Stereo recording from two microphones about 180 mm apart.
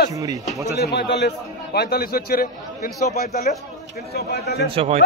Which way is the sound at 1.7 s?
60° left (ahead or behind).